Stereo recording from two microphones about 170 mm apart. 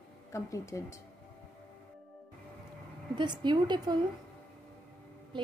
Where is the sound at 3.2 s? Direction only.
25° right (ahead or behind).